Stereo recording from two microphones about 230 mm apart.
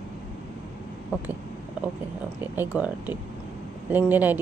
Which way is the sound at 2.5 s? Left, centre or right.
Centre.